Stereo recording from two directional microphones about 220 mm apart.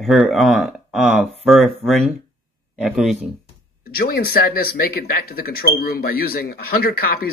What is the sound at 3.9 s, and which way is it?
Speech, 45° left (ahead or behind).